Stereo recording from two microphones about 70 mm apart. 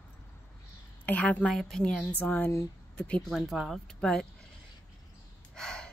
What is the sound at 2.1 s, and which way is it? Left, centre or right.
Speech, left.